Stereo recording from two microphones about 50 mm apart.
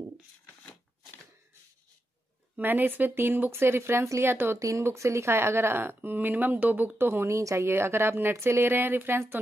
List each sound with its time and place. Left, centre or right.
2.6 s speech: right
4.6 s speech: right
4.9 s speech: right
7.0 s speech: right
7.2 s speech: right
7.7 s speech: right